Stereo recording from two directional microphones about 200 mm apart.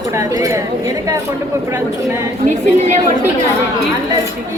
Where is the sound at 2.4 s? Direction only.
40° right (ahead or behind).